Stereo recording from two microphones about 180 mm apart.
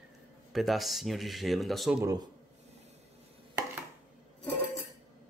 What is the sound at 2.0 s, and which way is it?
Speech, 20° right (ahead or behind).